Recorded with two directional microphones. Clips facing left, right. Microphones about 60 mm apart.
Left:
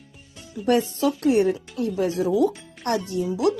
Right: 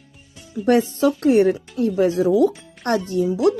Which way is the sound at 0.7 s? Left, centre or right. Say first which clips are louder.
Right 4 dB; right.